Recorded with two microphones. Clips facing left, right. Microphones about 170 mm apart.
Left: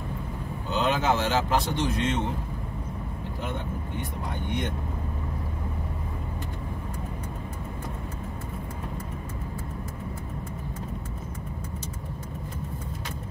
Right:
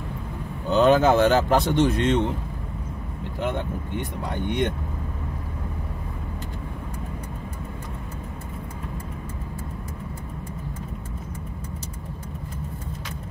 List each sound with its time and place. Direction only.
0.7 s speech: 50° right (ahead or behind)